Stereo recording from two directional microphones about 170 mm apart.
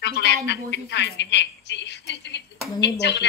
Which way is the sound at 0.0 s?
80° left.